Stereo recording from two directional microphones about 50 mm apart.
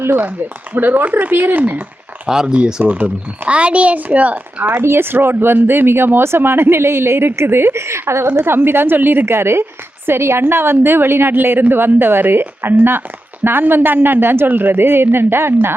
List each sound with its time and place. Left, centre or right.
0.2 s speech: right
2.2 s a child's voice: centre; by 4.8 s right
4.8 s speech: right
8.4 s speech: right
9.2 s speech: right